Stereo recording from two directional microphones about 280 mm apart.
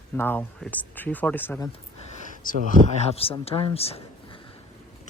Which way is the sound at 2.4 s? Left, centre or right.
Left.